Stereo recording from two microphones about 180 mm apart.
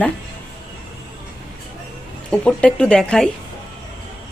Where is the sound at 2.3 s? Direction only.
5° left (ahead or behind).